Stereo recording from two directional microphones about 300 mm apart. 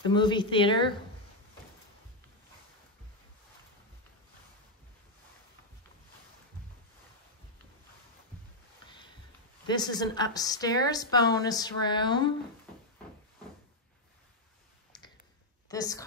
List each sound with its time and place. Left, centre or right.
0.0 s a woman's voice: centre
8.8 s sniff: centre
9.7 s a woman's voice: centre
15.7 s a woman's voice: centre